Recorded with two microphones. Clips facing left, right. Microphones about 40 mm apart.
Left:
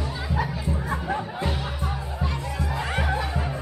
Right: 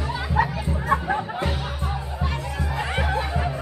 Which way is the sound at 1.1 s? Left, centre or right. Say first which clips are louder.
Right 2 dB; centre.